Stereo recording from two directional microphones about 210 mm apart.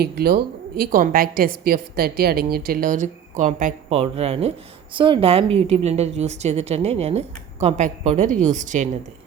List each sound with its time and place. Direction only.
0.0 s a woman's voice: 50° right (ahead or behind)